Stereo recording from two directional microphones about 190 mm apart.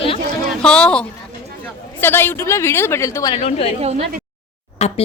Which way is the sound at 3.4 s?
30° left (ahead or behind).